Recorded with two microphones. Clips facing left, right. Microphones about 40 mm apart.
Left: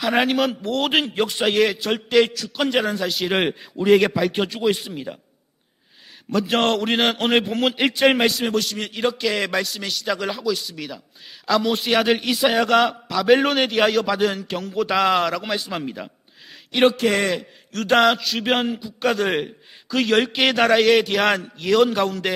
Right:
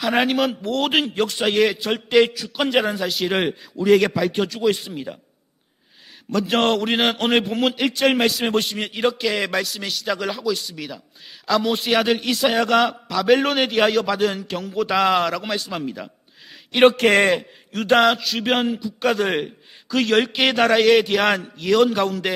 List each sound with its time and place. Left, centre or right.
0.0 s a man's voice: centre
3.3 s a man's voice: centre
4.4 s a man's voice: left
4.6 s a man's voice: centre
6.3 s a man's voice: centre
8.4 s a man's voice: right
8.7 s a man's voice: centre
16.8 s speech: right
17.7 s a sound: centre
17.9 s a man's voice: centre